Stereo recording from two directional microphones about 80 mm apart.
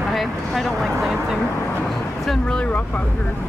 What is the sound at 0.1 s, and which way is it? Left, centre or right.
Vehicle, centre.